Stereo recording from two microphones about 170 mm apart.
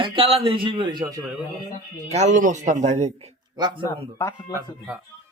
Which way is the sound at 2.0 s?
40° right (ahead or behind).